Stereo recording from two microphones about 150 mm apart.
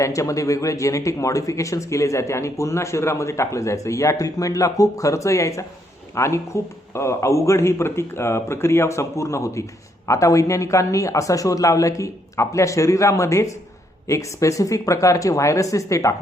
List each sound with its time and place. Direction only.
0.0 s speech: 20° left (ahead or behind)